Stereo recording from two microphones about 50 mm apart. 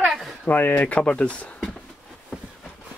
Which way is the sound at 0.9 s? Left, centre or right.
Left.